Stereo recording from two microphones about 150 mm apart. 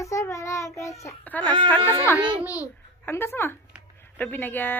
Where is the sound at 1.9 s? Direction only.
20° left (ahead or behind).